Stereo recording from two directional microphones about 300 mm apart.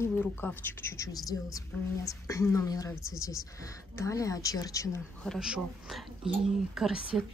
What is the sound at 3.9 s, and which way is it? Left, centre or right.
Speech, centre.